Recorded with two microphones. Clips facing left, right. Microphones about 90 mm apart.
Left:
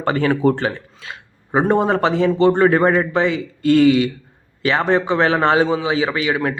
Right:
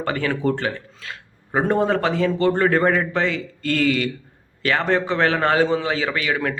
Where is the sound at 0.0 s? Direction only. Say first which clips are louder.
Left 6 dB; 30° left (ahead or behind).